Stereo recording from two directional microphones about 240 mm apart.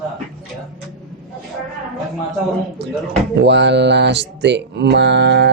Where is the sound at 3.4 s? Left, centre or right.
Right.